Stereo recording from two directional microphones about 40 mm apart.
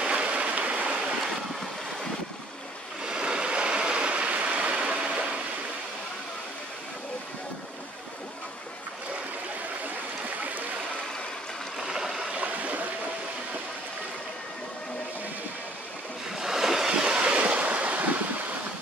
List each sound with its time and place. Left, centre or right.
0.0 s stream: right
3.0 s stream: right
11.8 s stream: centre
12.4 s stream: right
16.3 s waves: centre
17.0 s waves: right